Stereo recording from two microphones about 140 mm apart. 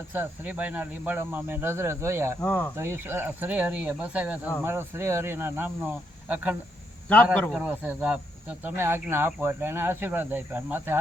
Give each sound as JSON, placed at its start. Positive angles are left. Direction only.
{"t": 0.1, "sound": "speech", "side_deg": -10}
{"t": 2.4, "sound": "speech", "side_deg": 10}
{"t": 2.7, "sound": "speech", "side_deg": -15}
{"t": 7.7, "sound": "speech", "side_deg": -10}